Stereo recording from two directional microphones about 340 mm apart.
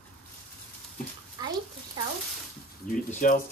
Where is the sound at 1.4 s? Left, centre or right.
Centre.